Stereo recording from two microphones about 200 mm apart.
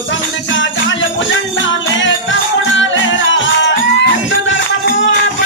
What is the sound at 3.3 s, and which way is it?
Music, 65° left (ahead or behind).